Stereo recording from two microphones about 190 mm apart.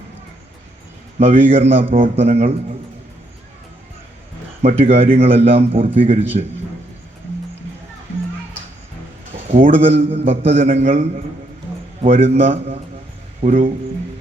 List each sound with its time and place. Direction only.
1.2 s a man's voice: 30° right (ahead or behind)
4.6 s a man's voice: 35° right (ahead or behind)
9.7 s a man's voice: 30° right (ahead or behind)
12.0 s a man's voice: 30° right (ahead or behind)
13.4 s speech: 45° right (ahead or behind)